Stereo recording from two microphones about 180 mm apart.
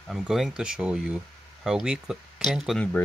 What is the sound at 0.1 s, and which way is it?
Speech, centre (ahead or behind).